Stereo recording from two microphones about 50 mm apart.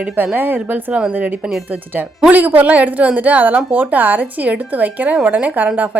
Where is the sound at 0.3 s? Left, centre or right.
Right.